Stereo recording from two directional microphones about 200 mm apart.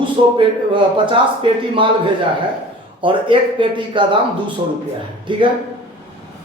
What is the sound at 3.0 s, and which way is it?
Speech, 25° right (ahead or behind).